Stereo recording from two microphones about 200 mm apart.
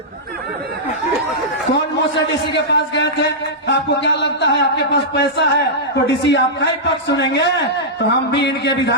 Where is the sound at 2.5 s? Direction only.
60° left (ahead or behind).